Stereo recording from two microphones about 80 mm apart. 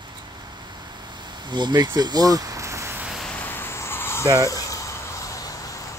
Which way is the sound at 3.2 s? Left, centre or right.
Left.